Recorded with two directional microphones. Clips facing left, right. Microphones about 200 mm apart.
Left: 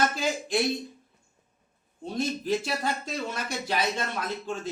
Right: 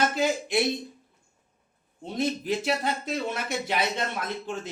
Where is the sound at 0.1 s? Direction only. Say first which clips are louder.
Right 4 dB; 20° right (ahead or behind).